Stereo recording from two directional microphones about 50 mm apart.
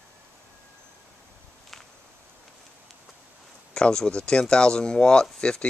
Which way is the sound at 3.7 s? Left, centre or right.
Centre.